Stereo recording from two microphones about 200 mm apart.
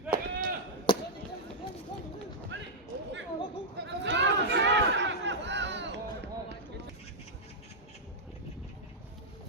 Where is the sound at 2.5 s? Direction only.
65° right (ahead or behind).